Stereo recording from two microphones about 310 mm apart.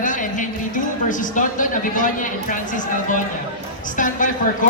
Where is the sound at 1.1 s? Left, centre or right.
Left.